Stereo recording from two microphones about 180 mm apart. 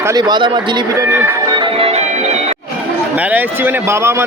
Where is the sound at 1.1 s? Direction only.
10° right (ahead or behind).